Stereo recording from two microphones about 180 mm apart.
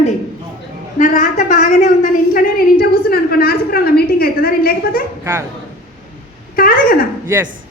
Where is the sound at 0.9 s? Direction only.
45° left (ahead or behind).